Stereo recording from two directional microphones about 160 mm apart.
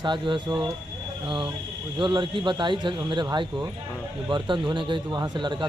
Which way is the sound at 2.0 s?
30° right (ahead or behind).